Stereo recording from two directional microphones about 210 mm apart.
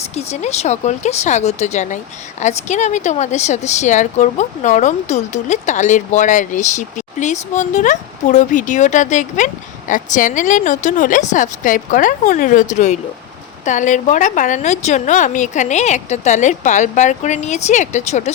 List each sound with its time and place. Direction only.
0.1 s speech: 30° left (ahead or behind)